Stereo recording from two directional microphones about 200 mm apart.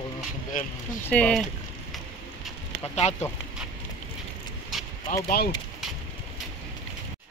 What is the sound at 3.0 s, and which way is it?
Speech, 35° left (ahead or behind).